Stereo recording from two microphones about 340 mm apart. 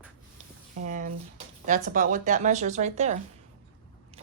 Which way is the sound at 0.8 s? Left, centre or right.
Right.